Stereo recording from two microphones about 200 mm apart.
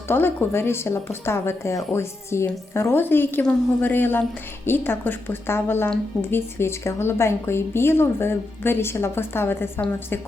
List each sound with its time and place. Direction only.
0.1 s a woman's voice: 10° left (ahead or behind)